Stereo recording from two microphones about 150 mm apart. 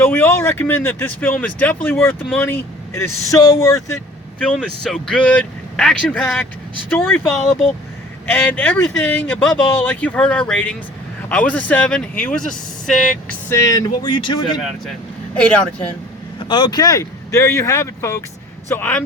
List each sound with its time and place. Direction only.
0.0 s speech: 15° left (ahead or behind)
7.3 s speech: centre (ahead or behind)
8.3 s speech: 10° left (ahead or behind)
13.5 s speech: 20° left (ahead or behind)
15.4 s speech: 5° left (ahead or behind)
16.5 s speech: 30° left (ahead or behind); by 19.0 s 10° left (ahead or behind)